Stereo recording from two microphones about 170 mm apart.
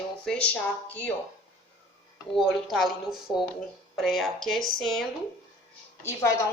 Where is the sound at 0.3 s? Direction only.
5° left (ahead or behind).